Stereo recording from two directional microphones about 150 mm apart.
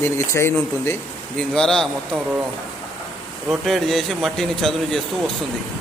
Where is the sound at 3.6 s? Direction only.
Centre (ahead or behind).